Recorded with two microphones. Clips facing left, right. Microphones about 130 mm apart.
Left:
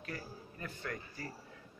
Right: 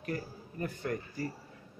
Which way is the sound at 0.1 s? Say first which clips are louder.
Right 8 dB; 40° right (ahead or behind).